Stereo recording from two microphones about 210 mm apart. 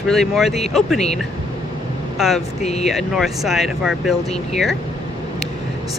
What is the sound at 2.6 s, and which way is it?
Speech, 30° left (ahead or behind).